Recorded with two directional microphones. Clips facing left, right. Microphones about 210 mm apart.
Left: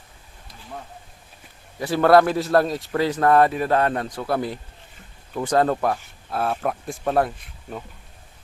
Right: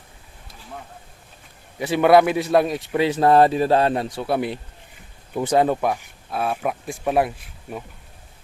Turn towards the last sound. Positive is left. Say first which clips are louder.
# right 1 dB
turn(degrees=-10)  # may be behind; listen again after turning